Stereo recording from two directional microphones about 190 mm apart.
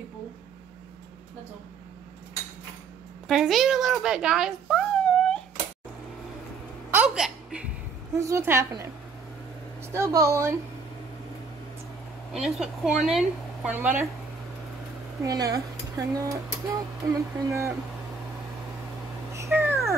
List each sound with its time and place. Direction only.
3.3 s speech: centre (ahead or behind)
6.9 s hiccup: 5° right (ahead or behind)
8.1 s speech: 15° right (ahead or behind)
9.9 s speech: 15° right (ahead or behind)
12.3 s speech: 5° right (ahead or behind)
15.2 s speech: 15° right (ahead or behind)
19.3 s cat: 15° right (ahead or behind)